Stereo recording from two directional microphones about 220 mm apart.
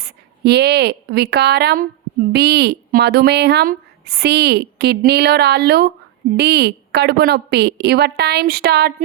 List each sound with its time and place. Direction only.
0.0 s speech: 50° right (ahead or behind)